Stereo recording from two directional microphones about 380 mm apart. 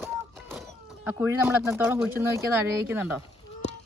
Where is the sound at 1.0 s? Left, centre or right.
Centre.